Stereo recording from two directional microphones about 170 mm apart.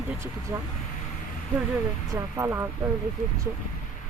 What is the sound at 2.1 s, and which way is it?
Speech, 15° right (ahead or behind).